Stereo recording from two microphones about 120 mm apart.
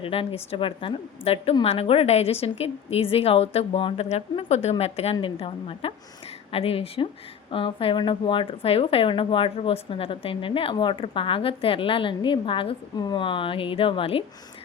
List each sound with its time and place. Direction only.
0.0 s a woman's voice: 50° left (ahead or behind)
5.2 s speech: 50° left (ahead or behind)